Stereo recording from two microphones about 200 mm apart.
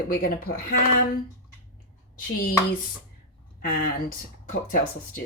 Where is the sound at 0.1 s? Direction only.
50° left (ahead or behind).